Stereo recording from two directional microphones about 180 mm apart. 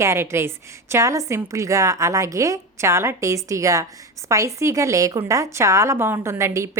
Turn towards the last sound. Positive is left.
turn(degrees=-15)  # may be behind; listen again after turning